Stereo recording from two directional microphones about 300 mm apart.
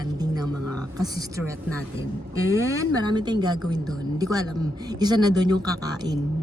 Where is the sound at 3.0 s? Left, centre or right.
Centre.